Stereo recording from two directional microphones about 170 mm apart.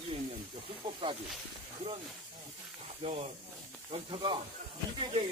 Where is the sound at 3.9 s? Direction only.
30° right (ahead or behind).